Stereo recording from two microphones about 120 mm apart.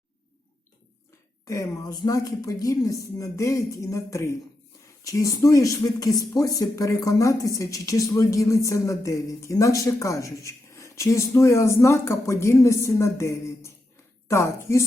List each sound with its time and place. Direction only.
1.5 s speech: 30° left (ahead or behind)